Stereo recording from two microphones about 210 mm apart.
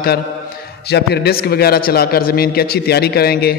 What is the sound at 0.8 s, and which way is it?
A man's voice, 50° left (ahead or behind).